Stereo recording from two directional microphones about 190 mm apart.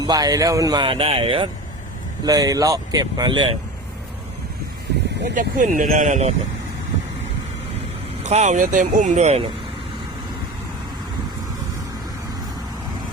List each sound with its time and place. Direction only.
0.0 s speech: 20° right (ahead or behind)
5.3 s speech: 45° right (ahead or behind)
8.2 s speech: 35° right (ahead or behind)